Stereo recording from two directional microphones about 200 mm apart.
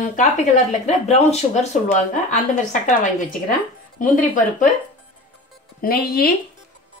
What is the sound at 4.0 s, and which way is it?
Speech, 40° left (ahead or behind).